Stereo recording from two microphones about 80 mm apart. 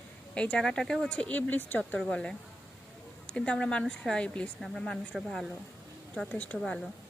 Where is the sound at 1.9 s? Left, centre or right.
Centre.